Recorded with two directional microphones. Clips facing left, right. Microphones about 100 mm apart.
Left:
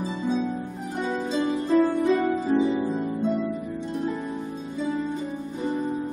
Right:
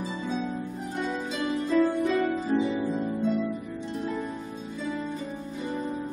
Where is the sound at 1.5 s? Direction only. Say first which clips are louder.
Left 2 dB; 30° left (ahead or behind).